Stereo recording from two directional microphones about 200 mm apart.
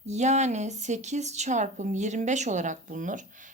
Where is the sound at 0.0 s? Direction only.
35° right (ahead or behind).